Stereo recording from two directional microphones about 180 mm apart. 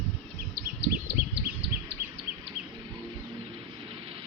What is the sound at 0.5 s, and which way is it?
Bird, 65° right (ahead or behind).